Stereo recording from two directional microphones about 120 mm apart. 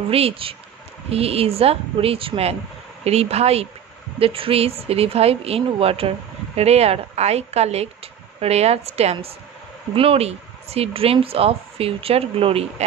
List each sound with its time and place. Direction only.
0.1 s speech: 50° right (ahead or behind)